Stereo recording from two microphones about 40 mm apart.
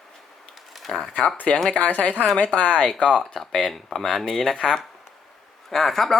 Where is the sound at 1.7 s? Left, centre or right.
Left.